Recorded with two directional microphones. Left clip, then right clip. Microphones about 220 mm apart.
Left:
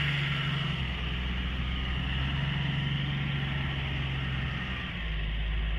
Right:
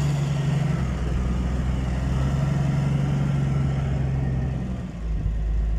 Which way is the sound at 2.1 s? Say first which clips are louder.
Right 5 dB; 65° right (ahead or behind).